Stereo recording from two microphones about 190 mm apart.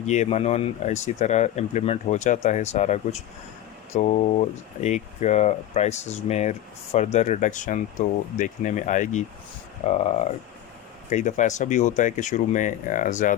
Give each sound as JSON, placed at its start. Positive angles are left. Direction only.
{"t": 0.0, "sound": "speech", "side_deg": 35}